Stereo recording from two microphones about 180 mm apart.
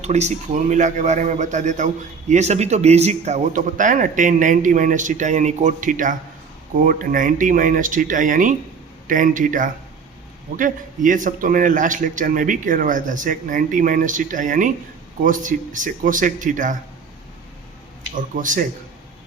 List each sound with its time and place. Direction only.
0.0 s a man's voice: 40° right (ahead or behind)
18.1 s a man's voice: 45° right (ahead or behind)